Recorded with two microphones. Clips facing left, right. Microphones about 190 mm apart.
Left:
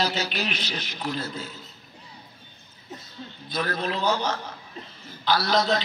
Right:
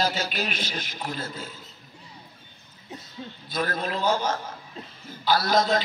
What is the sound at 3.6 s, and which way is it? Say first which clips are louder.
A man's voice: even; 45° right (ahead or behind).